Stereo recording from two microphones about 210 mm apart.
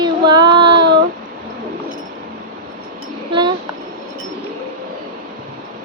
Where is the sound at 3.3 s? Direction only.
20° right (ahead or behind).